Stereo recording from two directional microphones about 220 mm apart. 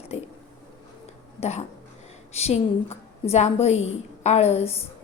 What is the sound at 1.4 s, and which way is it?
A woman's voice, 30° left (ahead or behind).